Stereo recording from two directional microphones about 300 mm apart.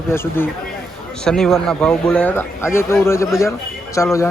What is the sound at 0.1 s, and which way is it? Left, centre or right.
A man's voice, centre.